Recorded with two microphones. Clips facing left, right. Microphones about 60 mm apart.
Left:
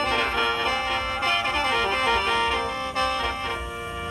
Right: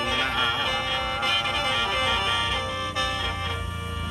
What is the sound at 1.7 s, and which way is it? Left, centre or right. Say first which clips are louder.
Music: left 3 dB; left.